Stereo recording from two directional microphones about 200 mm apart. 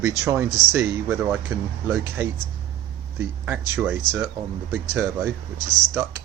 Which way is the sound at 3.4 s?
10° right (ahead or behind).